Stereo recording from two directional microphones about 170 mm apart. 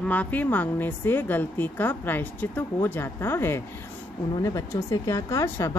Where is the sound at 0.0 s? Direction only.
10° left (ahead or behind).